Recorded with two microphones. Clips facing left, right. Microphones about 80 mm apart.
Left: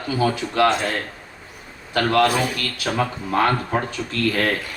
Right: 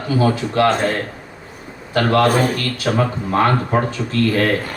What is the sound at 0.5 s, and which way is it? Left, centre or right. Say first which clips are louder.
Speech: right 2 dB; right.